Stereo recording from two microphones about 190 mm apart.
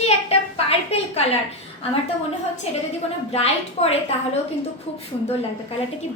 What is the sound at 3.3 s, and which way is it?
Speech, 35° left (ahead or behind).